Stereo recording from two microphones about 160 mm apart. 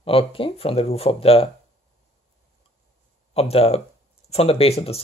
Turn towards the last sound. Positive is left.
turn(degrees=40)  # may be behind; listen again after turning